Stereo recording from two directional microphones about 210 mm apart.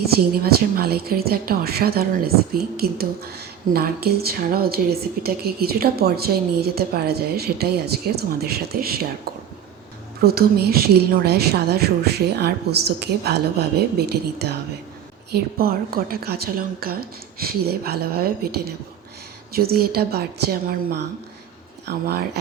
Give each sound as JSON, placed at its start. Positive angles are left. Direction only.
{"t": 0.0, "sound": "a woman's voice", "side_deg": -45}